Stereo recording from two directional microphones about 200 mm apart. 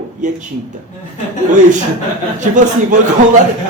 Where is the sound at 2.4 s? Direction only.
40° right (ahead or behind).